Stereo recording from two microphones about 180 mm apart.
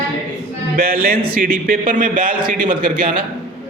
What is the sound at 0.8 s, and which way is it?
A man's voice, 55° right (ahead or behind).